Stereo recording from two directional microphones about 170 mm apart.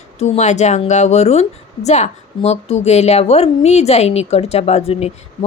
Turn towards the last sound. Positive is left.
turn(degrees=40)  # may be behind; listen again after turning